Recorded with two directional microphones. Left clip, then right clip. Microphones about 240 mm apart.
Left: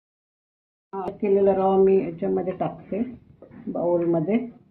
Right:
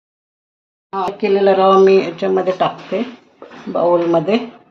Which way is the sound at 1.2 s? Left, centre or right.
Right.